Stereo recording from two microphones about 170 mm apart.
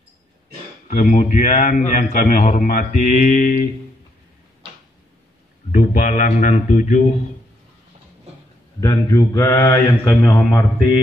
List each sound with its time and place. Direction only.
0.8 s speech: 45° left (ahead or behind)
5.7 s speech: 45° left (ahead or behind)
8.8 s speech: 20° left (ahead or behind)